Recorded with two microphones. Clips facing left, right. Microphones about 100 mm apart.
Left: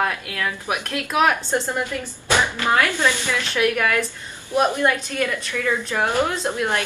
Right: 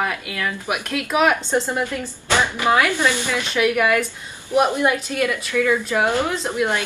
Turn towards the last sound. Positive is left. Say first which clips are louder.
# right 1 dB
turn(degrees=-15)  # may be behind; listen again after turning